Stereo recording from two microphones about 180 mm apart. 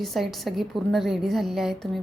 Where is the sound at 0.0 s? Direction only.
Centre (ahead or behind).